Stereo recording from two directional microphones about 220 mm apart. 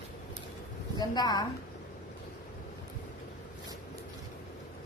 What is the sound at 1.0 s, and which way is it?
Speech, 20° left (ahead or behind).